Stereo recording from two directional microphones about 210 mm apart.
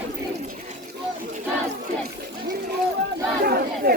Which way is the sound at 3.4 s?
50° right (ahead or behind).